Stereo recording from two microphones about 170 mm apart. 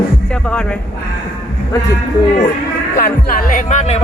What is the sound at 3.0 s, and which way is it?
Speech, 50° left (ahead or behind).